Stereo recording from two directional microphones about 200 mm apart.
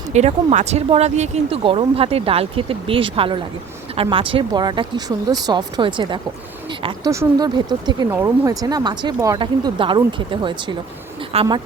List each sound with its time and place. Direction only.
0.1 s speech: 35° right (ahead or behind)